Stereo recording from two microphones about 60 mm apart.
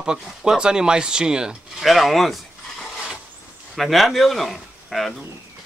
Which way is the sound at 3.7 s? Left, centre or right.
Centre.